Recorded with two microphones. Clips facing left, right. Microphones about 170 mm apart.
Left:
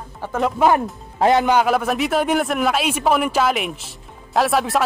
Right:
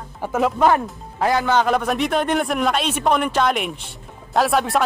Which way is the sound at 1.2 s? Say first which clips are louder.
Left 4 dB; 20° left (ahead or behind).